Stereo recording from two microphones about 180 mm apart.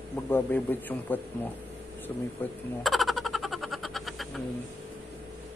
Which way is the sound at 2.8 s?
Centre (ahead or behind).